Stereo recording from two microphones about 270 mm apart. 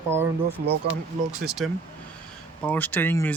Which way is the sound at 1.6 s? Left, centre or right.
Centre.